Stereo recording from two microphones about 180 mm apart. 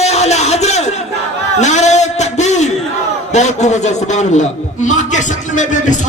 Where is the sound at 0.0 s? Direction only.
35° left (ahead or behind).